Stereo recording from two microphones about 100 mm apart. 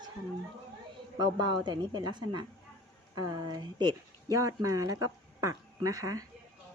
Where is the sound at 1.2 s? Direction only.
45° right (ahead or behind).